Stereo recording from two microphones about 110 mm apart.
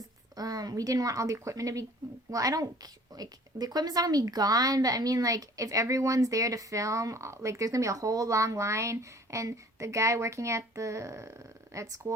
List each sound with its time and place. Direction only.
0.3 s a woman's voice: 35° right (ahead or behind)